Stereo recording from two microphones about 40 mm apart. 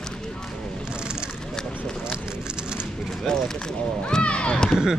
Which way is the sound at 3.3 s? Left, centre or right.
Centre.